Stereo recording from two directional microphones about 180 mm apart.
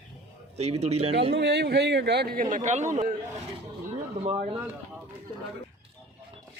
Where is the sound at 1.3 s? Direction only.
70° right (ahead or behind); by 2.8 s 40° right (ahead or behind).